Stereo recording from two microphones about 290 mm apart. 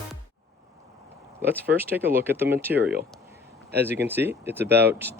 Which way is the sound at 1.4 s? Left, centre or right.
Centre.